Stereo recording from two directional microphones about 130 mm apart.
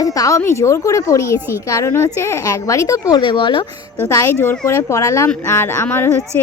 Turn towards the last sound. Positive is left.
turn(degrees=20)  # may be behind; listen again after turning